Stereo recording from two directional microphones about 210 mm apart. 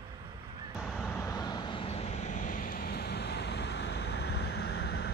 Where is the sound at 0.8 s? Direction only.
5° left (ahead or behind).